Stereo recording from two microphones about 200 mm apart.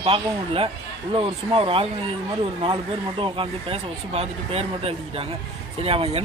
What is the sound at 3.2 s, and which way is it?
Speech, 25° right (ahead or behind).